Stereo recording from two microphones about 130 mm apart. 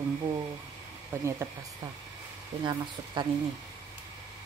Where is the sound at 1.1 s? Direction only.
15° right (ahead or behind).